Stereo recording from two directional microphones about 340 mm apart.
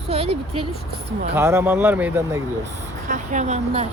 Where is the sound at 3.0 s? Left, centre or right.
Right.